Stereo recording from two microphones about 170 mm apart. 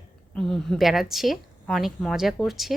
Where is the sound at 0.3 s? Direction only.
5° left (ahead or behind).